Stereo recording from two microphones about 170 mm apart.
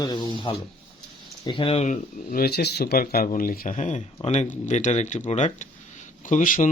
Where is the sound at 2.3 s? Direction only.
65° left (ahead or behind).